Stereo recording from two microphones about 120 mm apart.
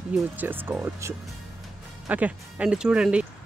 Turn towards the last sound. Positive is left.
turn(degrees=-10)  # may be behind; listen again after turning